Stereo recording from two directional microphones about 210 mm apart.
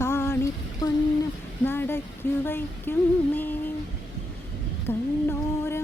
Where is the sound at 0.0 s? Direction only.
10° left (ahead or behind).